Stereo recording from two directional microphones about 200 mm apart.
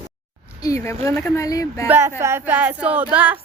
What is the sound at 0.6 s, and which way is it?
Speech, 15° left (ahead or behind).